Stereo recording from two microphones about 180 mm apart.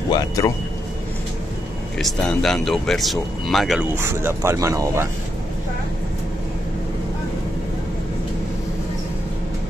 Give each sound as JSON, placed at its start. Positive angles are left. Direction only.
{"t": 0.1, "sound": "speech", "side_deg": 20}
{"t": 2.0, "sound": "speech", "side_deg": 0}
{"t": 3.9, "sound": "speech", "side_deg": -15}